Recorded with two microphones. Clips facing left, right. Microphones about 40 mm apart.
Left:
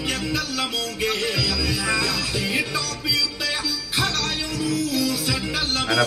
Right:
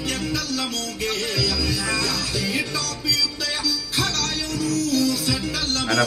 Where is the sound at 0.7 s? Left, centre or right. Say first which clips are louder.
Left 2 dB; centre.